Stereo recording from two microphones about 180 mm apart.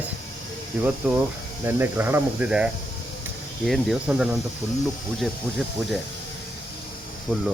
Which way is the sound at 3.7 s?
5° right (ahead or behind).